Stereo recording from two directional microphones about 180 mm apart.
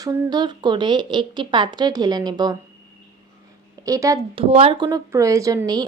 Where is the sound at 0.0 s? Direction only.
20° right (ahead or behind).